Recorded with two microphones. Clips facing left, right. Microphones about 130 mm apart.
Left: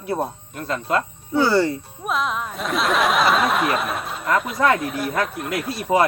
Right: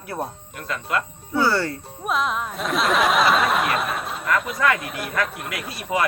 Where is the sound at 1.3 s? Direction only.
20° left (ahead or behind).